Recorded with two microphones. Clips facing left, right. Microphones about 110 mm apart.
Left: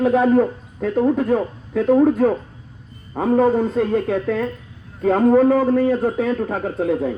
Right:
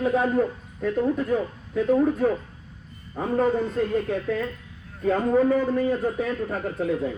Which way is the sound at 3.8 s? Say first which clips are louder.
Left 5 dB; 90° left.